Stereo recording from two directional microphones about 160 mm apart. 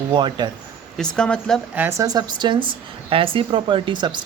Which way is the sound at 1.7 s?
15° right (ahead or behind).